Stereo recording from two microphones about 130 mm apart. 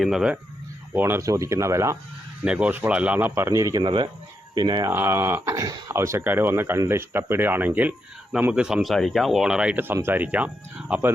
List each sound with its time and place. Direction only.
0.0 s speech: 5° right (ahead or behind)
0.9 s speech: 15° right (ahead or behind)
2.4 s speech: 10° right (ahead or behind); by 3.8 s 25° right (ahead or behind)
3.8 s speech: 35° right (ahead or behind)
4.9 s speech: 15° right (ahead or behind)